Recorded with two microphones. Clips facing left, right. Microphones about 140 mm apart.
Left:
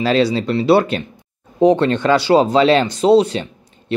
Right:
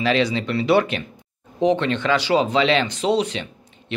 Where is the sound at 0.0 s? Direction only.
35° left (ahead or behind).